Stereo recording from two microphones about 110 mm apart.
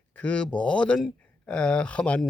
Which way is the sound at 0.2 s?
10° left (ahead or behind).